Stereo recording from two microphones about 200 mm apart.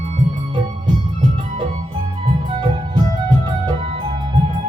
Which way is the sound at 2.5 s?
20° right (ahead or behind).